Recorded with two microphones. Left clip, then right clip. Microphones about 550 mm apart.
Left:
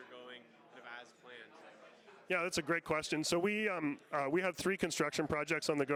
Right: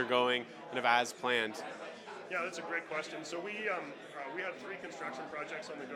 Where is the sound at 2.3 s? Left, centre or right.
Left.